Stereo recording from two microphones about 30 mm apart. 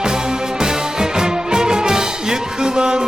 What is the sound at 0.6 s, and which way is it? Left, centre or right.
Music, right.